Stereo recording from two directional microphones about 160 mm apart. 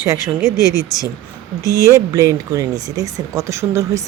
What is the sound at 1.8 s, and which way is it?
Speech, 20° right (ahead or behind).